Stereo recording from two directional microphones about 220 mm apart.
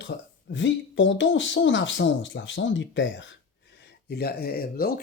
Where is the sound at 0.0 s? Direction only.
55° left (ahead or behind).